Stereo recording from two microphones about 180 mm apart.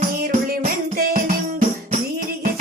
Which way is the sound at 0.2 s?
55° right (ahead or behind).